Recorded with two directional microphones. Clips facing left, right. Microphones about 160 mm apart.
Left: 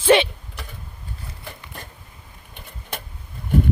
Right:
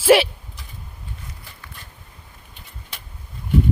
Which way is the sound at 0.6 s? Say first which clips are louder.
Left 10 dB; 70° left (ahead or behind).